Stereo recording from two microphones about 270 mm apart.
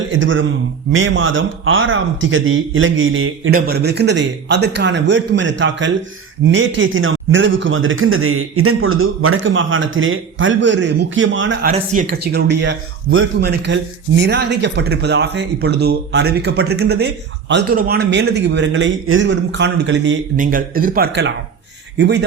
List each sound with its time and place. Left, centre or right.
0.1 s a man's voice: right
11.7 s speech: right